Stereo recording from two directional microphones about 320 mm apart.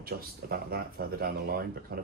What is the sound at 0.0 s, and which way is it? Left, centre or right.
Speech, right.